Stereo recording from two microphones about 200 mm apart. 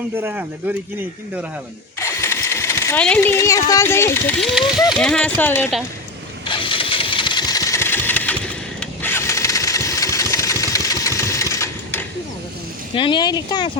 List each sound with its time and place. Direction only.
0.2 s speech: 10° right (ahead or behind)
2.0 s speech: 15° left (ahead or behind)
6.4 s engine starting: 25° left (ahead or behind)
12.9 s speech: 25° left (ahead or behind)